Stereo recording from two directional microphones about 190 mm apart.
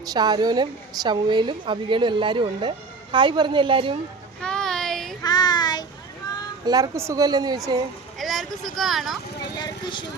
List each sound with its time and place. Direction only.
0.0 s a woman's voice: 20° right (ahead or behind)
4.4 s a sound: 5° left (ahead or behind)
5.2 s child singing: 20° left (ahead or behind)
6.7 s a woman's voice: 20° right (ahead or behind)
8.2 s speech: centre (ahead or behind)
9.6 s vehicle: 25° left (ahead or behind)